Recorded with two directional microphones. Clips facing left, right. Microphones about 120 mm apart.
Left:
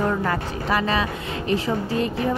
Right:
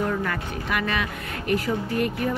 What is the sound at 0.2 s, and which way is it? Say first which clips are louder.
Speech: left 4 dB; 30° left (ahead or behind).